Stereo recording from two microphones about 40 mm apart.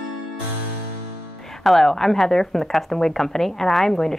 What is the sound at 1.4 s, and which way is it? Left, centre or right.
A woman's voice, centre.